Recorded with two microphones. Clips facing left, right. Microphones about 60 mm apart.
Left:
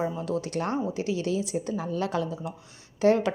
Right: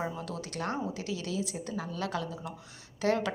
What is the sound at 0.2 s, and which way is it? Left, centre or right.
Speech, left.